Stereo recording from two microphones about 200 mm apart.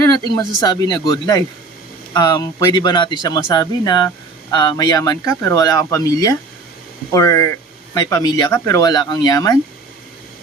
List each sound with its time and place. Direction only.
0.6 s speech: 20° left (ahead or behind)